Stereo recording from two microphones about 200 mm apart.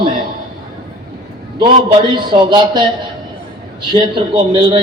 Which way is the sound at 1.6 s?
25° right (ahead or behind).